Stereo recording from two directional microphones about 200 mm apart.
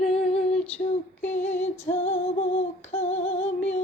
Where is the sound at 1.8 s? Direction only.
30° left (ahead or behind).